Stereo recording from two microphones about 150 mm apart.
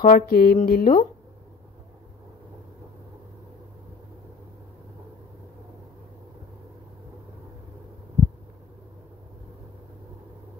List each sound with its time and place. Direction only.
0.0 s speech: 75° left (ahead or behind)